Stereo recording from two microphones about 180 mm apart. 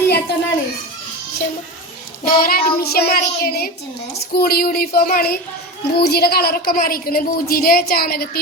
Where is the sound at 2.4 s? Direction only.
55° left (ahead or behind).